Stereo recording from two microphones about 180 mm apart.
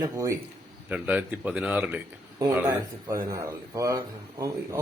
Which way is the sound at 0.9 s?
10° right (ahead or behind).